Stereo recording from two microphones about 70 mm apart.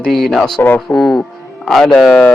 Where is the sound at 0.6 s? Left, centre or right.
Left.